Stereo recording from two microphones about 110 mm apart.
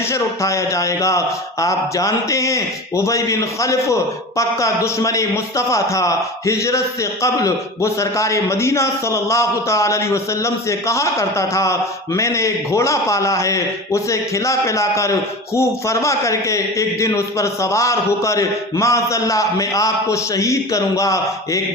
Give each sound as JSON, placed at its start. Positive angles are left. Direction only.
{"t": 0.0, "sound": "speech", "side_deg": 25}